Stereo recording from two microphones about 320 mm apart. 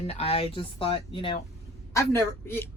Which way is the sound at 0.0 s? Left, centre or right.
Centre.